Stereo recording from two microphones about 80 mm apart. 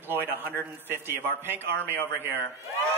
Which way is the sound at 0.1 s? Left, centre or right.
Right.